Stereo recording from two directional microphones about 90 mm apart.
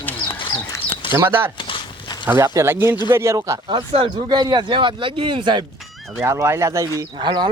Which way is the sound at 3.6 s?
65° right (ahead or behind).